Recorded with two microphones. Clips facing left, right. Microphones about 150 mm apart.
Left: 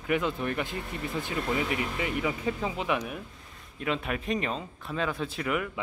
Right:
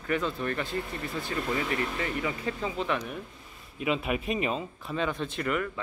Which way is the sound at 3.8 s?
5° right (ahead or behind).